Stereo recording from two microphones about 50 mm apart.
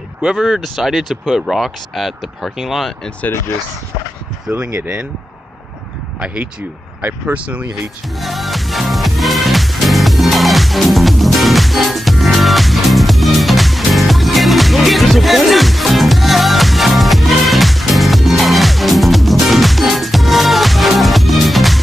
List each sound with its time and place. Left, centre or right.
0.4 s speech: centre
4.5 s speech: right
6.2 s speech: right
8.2 s music: centre